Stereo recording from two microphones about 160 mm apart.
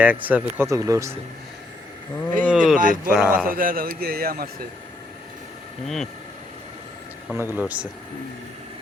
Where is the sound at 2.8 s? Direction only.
60° right (ahead or behind).